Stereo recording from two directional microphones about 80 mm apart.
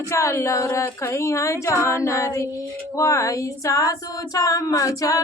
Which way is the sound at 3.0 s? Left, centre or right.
Left.